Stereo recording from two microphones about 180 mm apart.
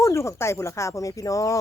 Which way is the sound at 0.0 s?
15° left (ahead or behind).